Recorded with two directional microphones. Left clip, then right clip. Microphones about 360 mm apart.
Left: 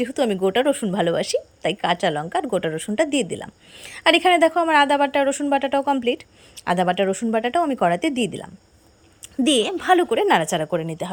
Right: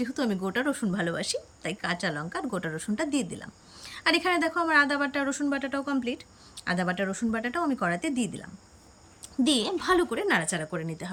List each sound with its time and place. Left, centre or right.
0.0 s a woman's voice: centre
4.0 s a woman's voice: centre